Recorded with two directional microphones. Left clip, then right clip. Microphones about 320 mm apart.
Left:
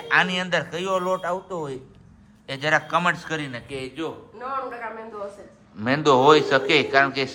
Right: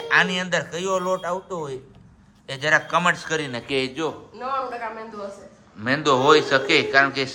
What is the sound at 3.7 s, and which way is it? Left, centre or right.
Speech, right.